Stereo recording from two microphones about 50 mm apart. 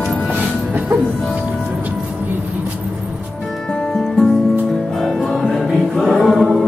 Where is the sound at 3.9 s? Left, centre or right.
Centre.